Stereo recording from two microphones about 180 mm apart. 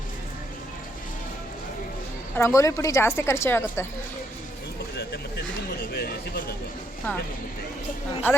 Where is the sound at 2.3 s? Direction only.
15° left (ahead or behind).